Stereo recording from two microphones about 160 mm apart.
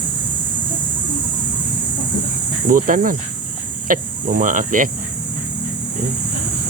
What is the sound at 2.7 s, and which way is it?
Speech, 60° right (ahead or behind).